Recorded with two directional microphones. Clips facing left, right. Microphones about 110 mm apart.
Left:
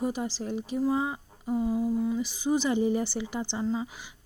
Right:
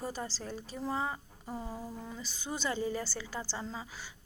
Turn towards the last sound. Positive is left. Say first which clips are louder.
# left 8 dB
turn(degrees=20)  # may be behind; listen again after turning